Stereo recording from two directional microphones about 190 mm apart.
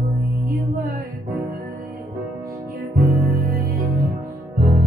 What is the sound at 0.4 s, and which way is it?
Music, 50° right (ahead or behind).